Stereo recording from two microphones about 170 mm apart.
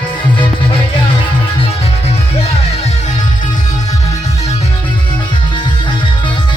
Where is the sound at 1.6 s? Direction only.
35° left (ahead or behind).